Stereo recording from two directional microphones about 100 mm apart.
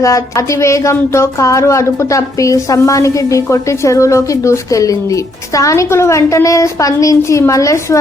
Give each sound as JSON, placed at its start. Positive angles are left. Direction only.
{"t": 0.0, "sound": "speech", "side_deg": 30}